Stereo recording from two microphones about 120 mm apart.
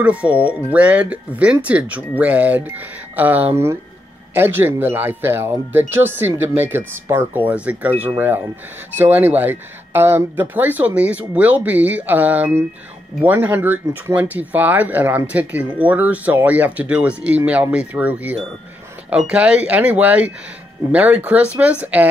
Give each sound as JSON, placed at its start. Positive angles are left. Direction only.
{"t": 0.0, "sound": "speech", "side_deg": -10}